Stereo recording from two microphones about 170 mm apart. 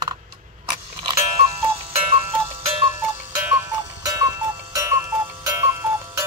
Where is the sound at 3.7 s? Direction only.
20° right (ahead or behind).